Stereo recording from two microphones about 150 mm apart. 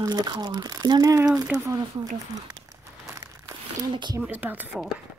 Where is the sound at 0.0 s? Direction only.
25° right (ahead or behind).